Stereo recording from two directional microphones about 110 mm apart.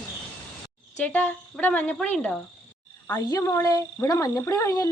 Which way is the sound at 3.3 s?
30° left (ahead or behind).